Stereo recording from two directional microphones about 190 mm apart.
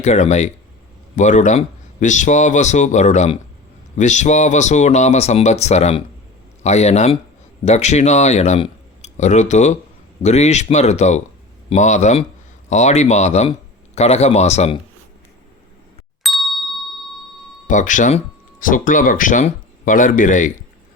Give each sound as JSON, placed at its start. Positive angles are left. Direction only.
{"t": 0.0, "sound": "a man's voice", "side_deg": 40}
{"t": 16.2, "sound": "ding", "side_deg": 0}
{"t": 17.7, "sound": "a man's voice", "side_deg": 40}